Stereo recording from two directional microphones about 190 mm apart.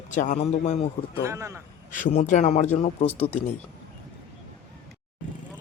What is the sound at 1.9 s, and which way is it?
A man's voice, 40° left (ahead or behind).